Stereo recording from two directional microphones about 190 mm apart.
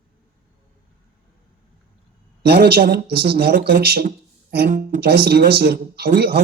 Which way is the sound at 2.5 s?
55° right (ahead or behind).